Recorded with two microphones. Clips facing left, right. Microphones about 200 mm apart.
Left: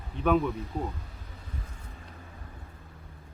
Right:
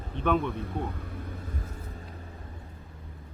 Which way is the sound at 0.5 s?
55° right (ahead or behind).